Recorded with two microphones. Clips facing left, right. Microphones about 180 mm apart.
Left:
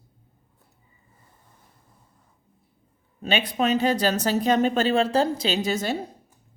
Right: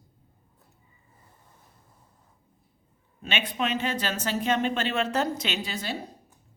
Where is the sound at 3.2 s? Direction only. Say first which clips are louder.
Left 6 dB; 40° left (ahead or behind).